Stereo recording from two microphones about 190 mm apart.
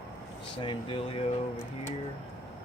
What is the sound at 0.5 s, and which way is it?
Speech, 25° left (ahead or behind).